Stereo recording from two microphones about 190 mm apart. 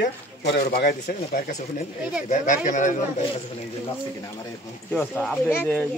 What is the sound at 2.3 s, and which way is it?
Speech, 40° left (ahead or behind).